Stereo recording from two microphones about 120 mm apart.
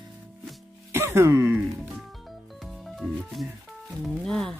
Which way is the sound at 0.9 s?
20° right (ahead or behind).